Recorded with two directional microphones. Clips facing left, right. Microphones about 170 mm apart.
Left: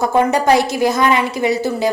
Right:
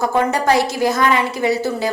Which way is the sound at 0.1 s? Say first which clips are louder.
Left 5 dB; 15° left (ahead or behind).